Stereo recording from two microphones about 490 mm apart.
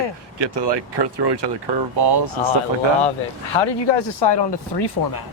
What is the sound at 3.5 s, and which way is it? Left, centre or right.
Speech, left.